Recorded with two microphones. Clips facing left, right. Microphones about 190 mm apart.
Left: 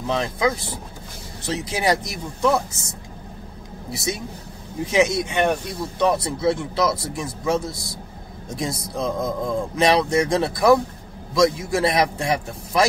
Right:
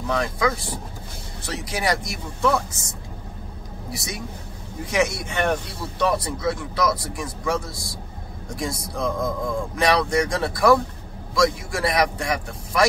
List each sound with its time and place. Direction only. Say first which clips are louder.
0.0 s speech: left 1 dB; 20° left (ahead or behind)
3.9 s speech: left 5 dB; 25° left (ahead or behind)